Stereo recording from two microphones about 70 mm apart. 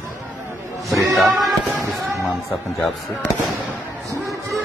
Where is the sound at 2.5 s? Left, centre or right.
Left.